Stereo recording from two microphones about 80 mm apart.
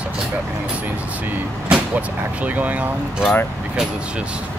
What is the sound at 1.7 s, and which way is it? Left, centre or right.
Speech, centre.